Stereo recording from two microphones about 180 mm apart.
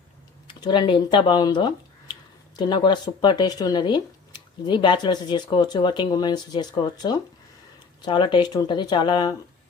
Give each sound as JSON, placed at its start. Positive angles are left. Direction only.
{"t": 0.4, "sound": "speech", "side_deg": 25}